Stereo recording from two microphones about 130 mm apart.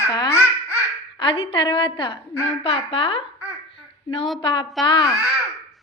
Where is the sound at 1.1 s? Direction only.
45° left (ahead or behind).